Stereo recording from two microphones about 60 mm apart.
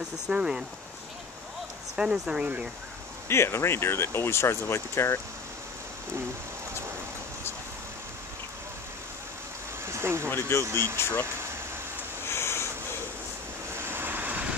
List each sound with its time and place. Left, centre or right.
0.3 s speech: centre
2.0 s speech: centre
3.3 s speech: left
9.8 s a sound: right
10.5 s speech: left
12.3 s a sound: left
13.7 s vehicle: right